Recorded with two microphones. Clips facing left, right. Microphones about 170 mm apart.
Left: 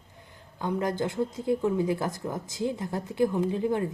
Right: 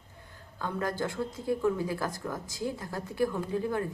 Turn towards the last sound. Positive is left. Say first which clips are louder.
# left 4 dB
turn(degrees=20)  # may be behind; listen again after turning